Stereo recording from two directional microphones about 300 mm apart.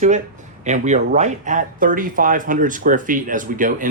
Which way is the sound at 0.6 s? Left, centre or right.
Right.